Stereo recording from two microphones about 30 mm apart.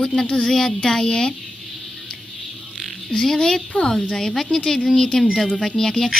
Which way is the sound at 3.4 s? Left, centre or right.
Left.